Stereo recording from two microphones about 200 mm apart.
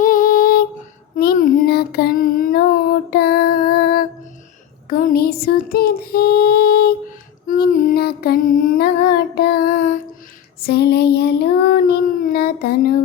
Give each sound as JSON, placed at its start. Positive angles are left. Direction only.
{"t": 0.0, "sound": "lullaby", "side_deg": 45}
{"t": 1.1, "sound": "child singing", "side_deg": 45}
{"t": 3.1, "sound": "female singing", "side_deg": 55}
{"t": 4.9, "sound": "a sound", "side_deg": 45}
{"t": 7.4, "sound": "music", "side_deg": 45}
{"t": 10.6, "sound": "child singing", "side_deg": 50}